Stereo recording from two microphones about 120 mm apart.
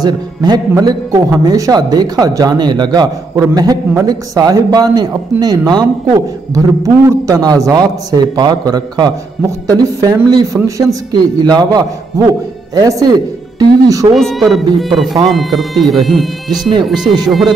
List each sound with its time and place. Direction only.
0.0 s a man's voice: 35° right (ahead or behind)
14.1 s speech: centre (ahead or behind)
17.0 s speech: 35° right (ahead or behind)